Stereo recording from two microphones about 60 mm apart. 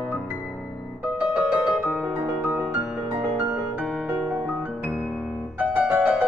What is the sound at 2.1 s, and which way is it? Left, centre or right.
Music, right.